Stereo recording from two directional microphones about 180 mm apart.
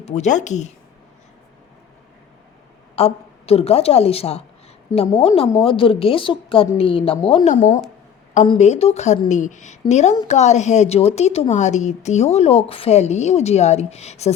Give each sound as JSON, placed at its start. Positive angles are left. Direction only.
{"t": 0.0, "sound": "a woman's voice", "side_deg": 40}
{"t": 2.9, "sound": "a woman's voice", "side_deg": 35}
{"t": 4.9, "sound": "a woman's voice", "side_deg": 15}
{"t": 5.2, "sound": "a woman's voice", "side_deg": 30}
{"t": 7.5, "sound": "a woman's voice", "side_deg": 45}